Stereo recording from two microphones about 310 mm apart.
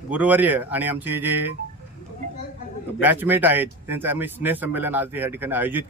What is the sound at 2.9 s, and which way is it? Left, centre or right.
Speech, centre.